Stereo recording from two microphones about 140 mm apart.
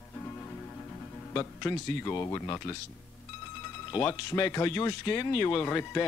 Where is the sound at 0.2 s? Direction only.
15° left (ahead or behind).